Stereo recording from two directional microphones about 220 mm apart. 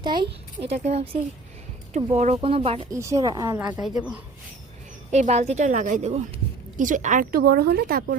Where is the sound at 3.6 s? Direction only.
5° right (ahead or behind).